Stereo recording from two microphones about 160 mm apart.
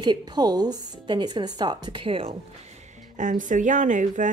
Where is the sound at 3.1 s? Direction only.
50° right (ahead or behind).